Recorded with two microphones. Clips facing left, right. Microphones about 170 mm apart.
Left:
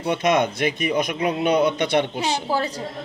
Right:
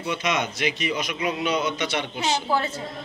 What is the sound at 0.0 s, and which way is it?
A man's voice, 50° left (ahead or behind).